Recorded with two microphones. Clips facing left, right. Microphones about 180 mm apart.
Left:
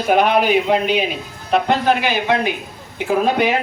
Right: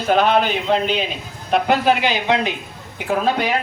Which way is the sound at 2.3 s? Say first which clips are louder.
Even; 15° right (ahead or behind).